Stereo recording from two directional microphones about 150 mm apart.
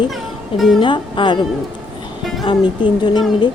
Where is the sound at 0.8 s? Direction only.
35° left (ahead or behind).